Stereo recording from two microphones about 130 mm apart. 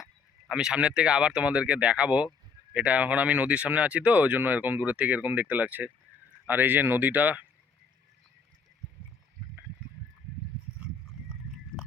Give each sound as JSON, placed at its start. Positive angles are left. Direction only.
{"t": 0.0, "sound": "speech", "side_deg": -5}